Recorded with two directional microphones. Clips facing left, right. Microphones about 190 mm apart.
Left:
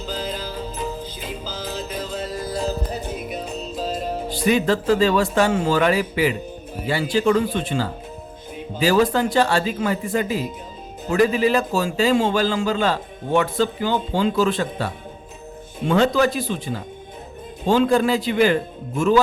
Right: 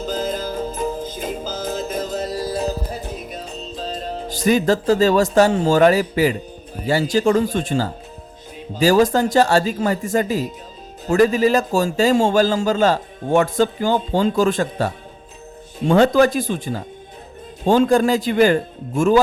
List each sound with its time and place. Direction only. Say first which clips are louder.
0.0 s music: right 5 dB; 45° right (ahead or behind); by 2.6 s 30° right (ahead or behind)
2.9 s music: left 2 dB; centre (ahead or behind)
4.4 s a man's voice: right 3 dB; 40° right (ahead or behind)